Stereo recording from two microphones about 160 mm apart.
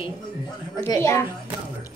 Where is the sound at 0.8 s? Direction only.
20° left (ahead or behind).